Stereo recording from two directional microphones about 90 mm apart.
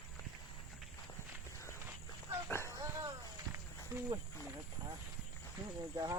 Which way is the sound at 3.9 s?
35° right (ahead or behind).